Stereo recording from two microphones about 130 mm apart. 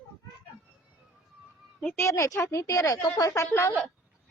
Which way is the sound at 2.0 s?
25° left (ahead or behind).